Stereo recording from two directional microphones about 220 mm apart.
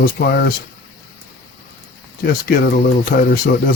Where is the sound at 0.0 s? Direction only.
45° left (ahead or behind).